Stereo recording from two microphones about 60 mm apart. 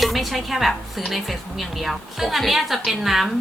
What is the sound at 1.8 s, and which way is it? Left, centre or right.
Speech, centre.